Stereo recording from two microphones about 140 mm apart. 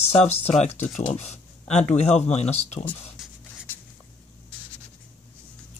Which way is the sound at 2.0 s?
50° left (ahead or behind).